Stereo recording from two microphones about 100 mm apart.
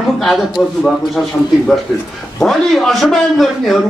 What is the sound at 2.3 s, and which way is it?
A man's voice, 5° left (ahead or behind).